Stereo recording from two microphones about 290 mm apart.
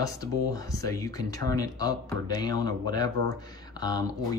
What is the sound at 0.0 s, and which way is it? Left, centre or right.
Speech, centre.